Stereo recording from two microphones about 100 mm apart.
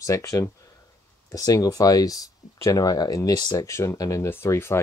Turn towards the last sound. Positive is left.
turn(degrees=25)  # may be behind; listen again after turning